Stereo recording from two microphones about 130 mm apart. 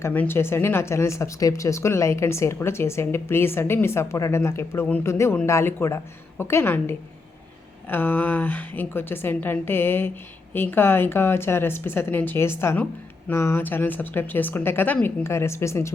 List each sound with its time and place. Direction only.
0.0 s a woman's voice: 15° left (ahead or behind)